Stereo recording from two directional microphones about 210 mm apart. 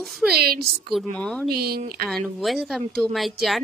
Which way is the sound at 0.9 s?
5° left (ahead or behind).